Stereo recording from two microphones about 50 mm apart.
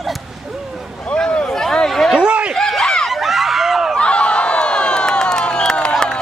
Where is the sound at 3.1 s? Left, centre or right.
Centre.